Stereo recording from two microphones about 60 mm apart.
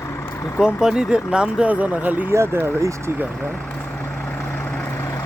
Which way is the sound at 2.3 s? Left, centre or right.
Right.